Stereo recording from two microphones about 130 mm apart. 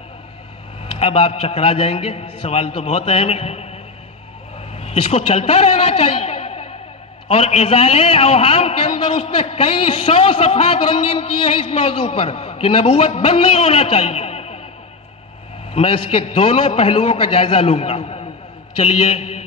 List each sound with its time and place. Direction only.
0.8 s a man's voice: 50° left (ahead or behind)
4.7 s a man's voice: 50° left (ahead or behind)
15.7 s a man's voice: 45° left (ahead or behind)